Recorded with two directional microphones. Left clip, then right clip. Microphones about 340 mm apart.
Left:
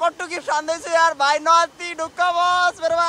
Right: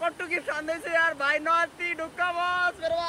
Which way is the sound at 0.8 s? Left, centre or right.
Centre.